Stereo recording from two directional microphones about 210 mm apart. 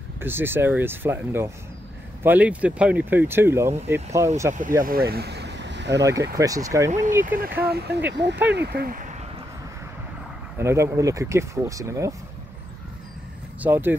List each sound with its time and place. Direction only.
0.2 s speech: 10° right (ahead or behind)
4.6 s speech: 40° right (ahead or behind)
6.3 s speech: 15° right (ahead or behind)
7.2 s speech: 45° right (ahead or behind)
10.6 s speech: 15° right (ahead or behind)
13.6 s speech: 10° right (ahead or behind)